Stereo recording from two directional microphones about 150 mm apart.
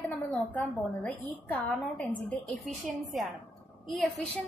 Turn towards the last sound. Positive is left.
turn(degrees=0)  # may be behind; listen again after turning